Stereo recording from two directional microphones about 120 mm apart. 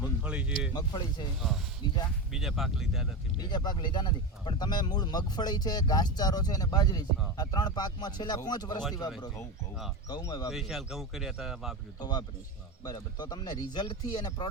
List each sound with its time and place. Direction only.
0.0 s a sound: 10° right (ahead or behind)
0.7 s speech: 35° left (ahead or behind)
2.3 s speech: centre (ahead or behind)
3.4 s speech: 40° left (ahead or behind)
10.1 s speech: 30° left (ahead or behind)
10.5 s speech: centre (ahead or behind)
11.9 s speech: 35° left (ahead or behind)